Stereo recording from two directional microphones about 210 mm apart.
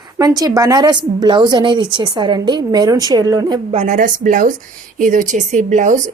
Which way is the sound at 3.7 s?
35° right (ahead or behind).